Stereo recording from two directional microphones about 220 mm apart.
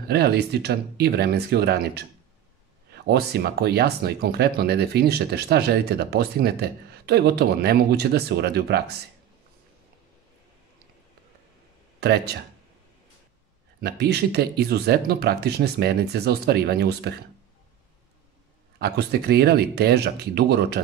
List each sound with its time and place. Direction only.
0.1 s speech: 50° right (ahead or behind)
12.0 s speech: 50° right (ahead or behind)
13.7 s speech: 45° right (ahead or behind)
18.8 s speech: 50° right (ahead or behind)